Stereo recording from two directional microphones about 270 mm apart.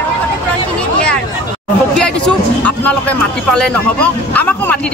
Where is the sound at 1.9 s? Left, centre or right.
Centre.